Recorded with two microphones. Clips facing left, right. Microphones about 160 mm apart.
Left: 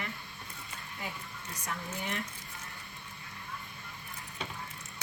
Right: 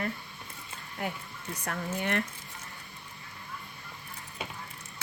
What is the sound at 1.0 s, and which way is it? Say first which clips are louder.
Speech: right 7 dB; 60° right (ahead or behind).